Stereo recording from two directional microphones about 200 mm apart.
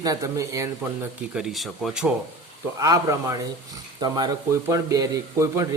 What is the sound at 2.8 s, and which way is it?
Speech, 15° right (ahead or behind).